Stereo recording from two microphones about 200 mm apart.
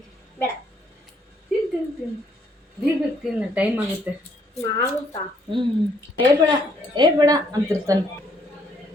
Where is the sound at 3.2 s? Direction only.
5° right (ahead or behind).